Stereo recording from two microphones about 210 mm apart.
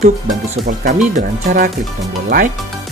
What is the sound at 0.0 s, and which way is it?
Speech, 35° right (ahead or behind).